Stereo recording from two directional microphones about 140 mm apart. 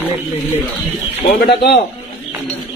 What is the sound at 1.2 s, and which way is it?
Speech, 90° left.